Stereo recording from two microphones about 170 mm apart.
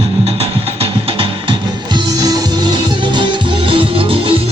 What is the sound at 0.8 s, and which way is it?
Music, 30° right (ahead or behind).